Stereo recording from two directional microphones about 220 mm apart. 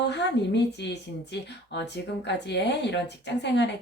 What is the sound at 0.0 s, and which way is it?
Speech, 50° left (ahead or behind).